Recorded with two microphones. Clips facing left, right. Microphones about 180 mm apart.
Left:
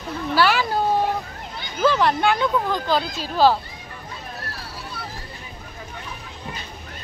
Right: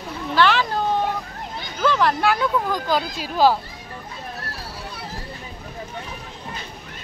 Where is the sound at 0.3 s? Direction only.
10° left (ahead or behind).